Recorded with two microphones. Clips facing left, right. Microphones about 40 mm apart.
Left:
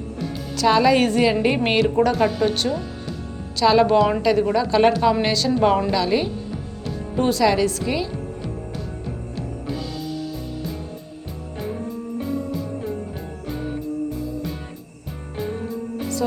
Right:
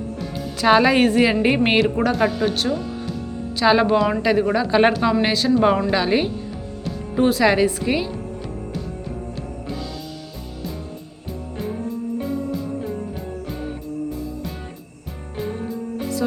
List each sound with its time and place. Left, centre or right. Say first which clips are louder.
0.5 s a woman's voice: right 1 dB; right; by 3.2 s centre
3.6 s speech: left 1 dB; centre
3.9 s speech: left 1 dB; centre
4.2 s speech: even; centre
5.2 s speech: right 2 dB; centre
5.9 s a woman's voice: right 1 dB; right
7.2 s speech: right 2 dB; centre
7.4 s a woman's voice: right 2 dB; right
12.2 s music: left 3 dB; centre